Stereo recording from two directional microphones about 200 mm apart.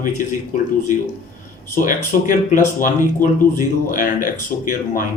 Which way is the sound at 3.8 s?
40° left (ahead or behind).